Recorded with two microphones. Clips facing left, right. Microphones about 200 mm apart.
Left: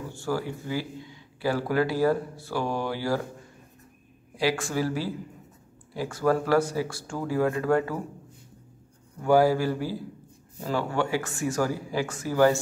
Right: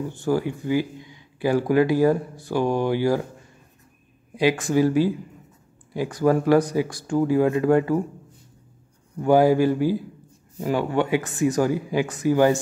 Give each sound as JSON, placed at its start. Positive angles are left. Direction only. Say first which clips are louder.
{"t": 0.1, "sound": "speech", "louder": "right 5 dB", "side_deg": -20}
{"t": 4.4, "sound": "speech", "louder": "right 7 dB", "side_deg": -20}
{"t": 9.2, "sound": "speech", "louder": "right 4 dB", "side_deg": -20}